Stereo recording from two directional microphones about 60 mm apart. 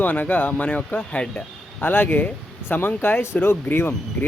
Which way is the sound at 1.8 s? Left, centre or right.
Left.